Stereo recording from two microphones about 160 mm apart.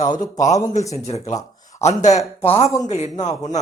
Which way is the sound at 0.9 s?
45° left (ahead or behind).